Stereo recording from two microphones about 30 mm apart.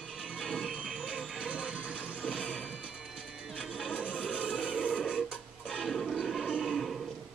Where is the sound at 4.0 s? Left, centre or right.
Left.